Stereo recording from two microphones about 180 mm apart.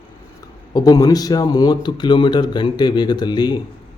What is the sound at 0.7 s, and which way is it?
Speech, 20° left (ahead or behind).